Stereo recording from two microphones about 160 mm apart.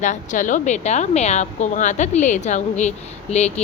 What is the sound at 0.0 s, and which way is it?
A woman's voice, 50° left (ahead or behind).